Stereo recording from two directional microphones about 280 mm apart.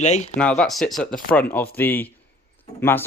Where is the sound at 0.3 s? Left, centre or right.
Centre.